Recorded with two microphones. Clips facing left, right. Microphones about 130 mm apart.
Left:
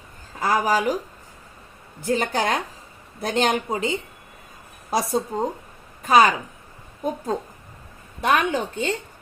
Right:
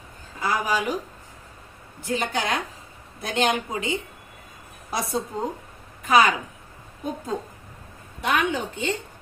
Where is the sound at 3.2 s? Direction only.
35° left (ahead or behind).